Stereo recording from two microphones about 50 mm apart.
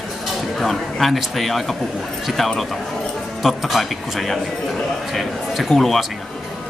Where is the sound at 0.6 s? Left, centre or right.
Centre.